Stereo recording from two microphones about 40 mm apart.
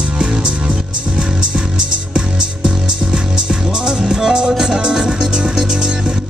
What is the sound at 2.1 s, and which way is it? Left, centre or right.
Music, right.